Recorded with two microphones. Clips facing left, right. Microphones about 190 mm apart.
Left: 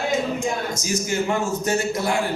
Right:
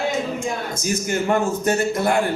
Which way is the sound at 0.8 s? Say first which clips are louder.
Right 3 dB; 55° right (ahead or behind).